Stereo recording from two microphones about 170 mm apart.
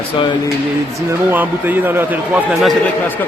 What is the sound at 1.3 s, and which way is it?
A man's voice, 10° right (ahead or behind).